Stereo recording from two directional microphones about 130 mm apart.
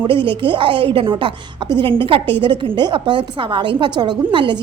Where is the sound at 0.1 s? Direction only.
40° right (ahead or behind).